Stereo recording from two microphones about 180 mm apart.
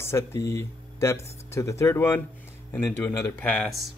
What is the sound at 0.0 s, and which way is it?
Speech, 15° left (ahead or behind).